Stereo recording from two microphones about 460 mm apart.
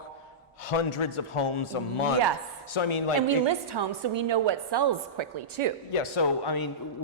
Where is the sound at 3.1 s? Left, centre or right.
Right.